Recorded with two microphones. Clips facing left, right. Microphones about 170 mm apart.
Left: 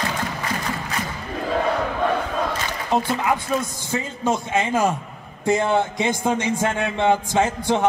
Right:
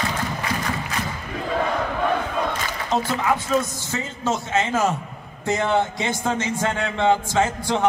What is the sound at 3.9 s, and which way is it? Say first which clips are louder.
Speech: left 5 dB; 15° left (ahead or behind).